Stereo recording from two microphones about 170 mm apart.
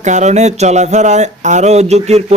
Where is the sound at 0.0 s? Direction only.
45° right (ahead or behind).